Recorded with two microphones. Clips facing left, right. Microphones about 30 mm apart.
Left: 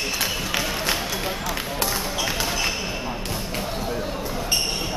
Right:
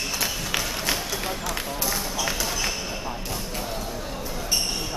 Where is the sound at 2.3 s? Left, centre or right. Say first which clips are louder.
Left 3 dB; left.